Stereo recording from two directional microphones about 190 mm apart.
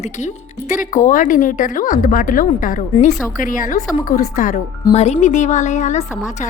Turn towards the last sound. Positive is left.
turn(degrees=40)  # may be behind; listen again after turning